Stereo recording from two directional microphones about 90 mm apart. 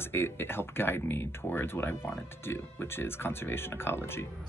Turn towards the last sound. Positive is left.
turn(degrees=25)  # may be behind; listen again after turning